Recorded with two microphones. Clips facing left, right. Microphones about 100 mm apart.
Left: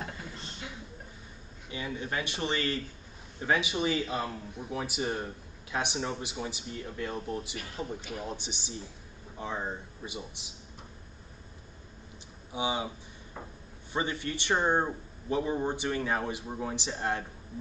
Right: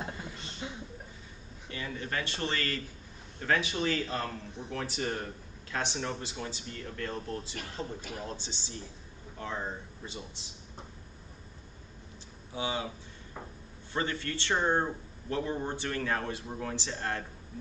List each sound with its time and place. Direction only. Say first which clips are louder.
0.6 s a sound: right 4 dB; 25° right (ahead or behind)
1.7 s speech: left 2 dB; 15° left (ahead or behind)
12.5 s speech: left 2 dB; 15° left (ahead or behind)
13.9 s speech: left 1 dB; 15° left (ahead or behind)